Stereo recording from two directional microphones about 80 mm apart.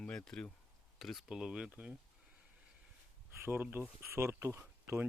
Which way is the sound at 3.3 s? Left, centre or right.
Right.